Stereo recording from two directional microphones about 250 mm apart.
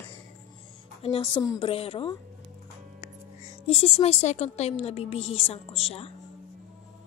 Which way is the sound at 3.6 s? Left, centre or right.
Left.